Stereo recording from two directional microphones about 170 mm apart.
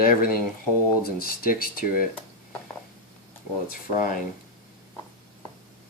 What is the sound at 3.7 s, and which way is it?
Speech, 55° left (ahead or behind).